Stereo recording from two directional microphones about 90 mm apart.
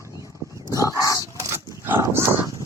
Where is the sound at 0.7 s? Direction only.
40° right (ahead or behind).